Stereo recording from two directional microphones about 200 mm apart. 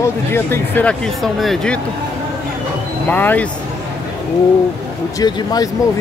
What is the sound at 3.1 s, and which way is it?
Speech, 10° left (ahead or behind).